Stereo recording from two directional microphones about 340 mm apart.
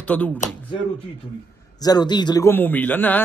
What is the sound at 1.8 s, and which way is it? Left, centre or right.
A man's voice, centre.